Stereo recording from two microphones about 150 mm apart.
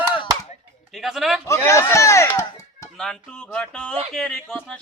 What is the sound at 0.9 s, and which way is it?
Speech, centre (ahead or behind).